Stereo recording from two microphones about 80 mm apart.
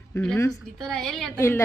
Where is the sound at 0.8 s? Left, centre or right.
Centre.